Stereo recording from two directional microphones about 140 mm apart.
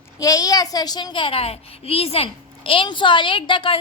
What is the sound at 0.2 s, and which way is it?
A child's voice, 25° left (ahead or behind).